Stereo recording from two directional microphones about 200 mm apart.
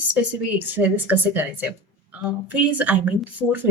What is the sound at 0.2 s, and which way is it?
Speech, 5° right (ahead or behind).